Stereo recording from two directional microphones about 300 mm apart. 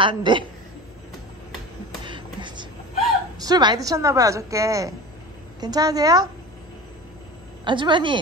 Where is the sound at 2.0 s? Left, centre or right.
Centre.